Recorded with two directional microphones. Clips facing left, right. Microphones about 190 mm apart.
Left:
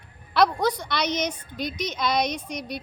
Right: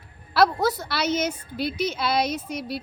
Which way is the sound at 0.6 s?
5° right (ahead or behind).